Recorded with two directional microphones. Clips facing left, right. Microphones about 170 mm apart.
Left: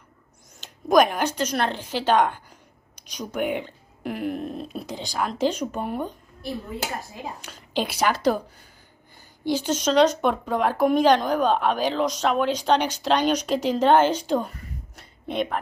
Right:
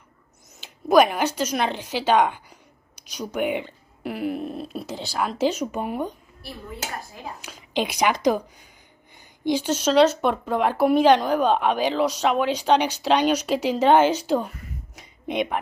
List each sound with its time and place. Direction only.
0.6 s speech: 5° right (ahead or behind)
7.8 s speech: 15° right (ahead or behind)
9.4 s speech: 10° right (ahead or behind)
15.0 s a sound: 10° right (ahead or behind)